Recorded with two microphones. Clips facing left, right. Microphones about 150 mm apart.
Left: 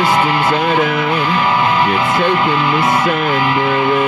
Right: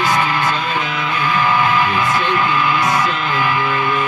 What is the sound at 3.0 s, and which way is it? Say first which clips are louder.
Music: left 5 dB; 55° left (ahead or behind).